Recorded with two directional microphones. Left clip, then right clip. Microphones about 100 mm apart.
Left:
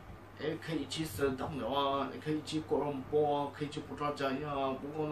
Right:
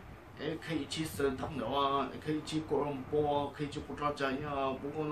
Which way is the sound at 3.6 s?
20° right (ahead or behind).